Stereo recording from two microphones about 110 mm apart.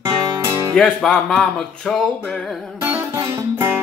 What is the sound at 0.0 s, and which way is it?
Music, 25° right (ahead or behind).